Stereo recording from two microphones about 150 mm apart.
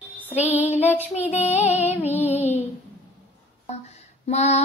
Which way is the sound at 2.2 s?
10° right (ahead or behind).